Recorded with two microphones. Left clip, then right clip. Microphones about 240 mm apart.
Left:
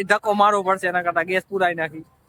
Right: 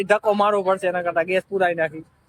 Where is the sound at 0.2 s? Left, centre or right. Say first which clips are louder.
Left 1 dB; centre.